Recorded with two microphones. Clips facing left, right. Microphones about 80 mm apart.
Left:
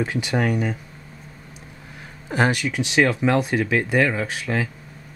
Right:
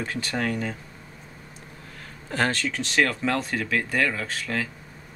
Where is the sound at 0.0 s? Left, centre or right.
Centre.